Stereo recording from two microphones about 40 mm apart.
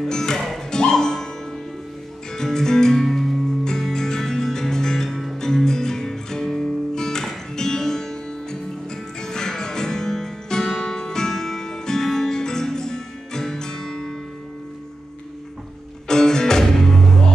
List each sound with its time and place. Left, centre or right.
0.1 s music: centre
2.3 s music: centre
16.1 s music: centre